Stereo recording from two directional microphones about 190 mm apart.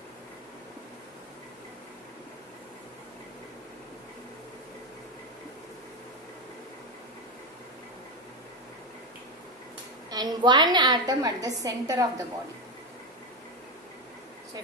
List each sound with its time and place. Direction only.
10.1 s a woman's voice: 20° right (ahead or behind)